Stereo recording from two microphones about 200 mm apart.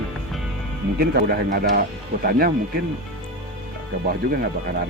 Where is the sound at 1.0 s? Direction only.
50° right (ahead or behind).